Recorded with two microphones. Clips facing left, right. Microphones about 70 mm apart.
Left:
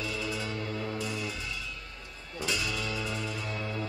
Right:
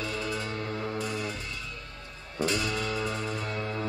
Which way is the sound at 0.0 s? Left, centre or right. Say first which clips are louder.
Right 2 dB; right.